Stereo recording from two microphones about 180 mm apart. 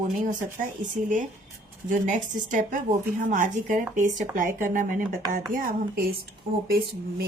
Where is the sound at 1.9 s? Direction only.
45° right (ahead or behind).